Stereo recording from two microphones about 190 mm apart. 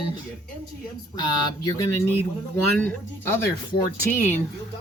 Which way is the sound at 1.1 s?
20° left (ahead or behind).